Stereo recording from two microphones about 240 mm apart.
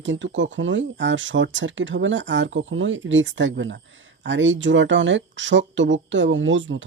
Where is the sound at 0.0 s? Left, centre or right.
Right.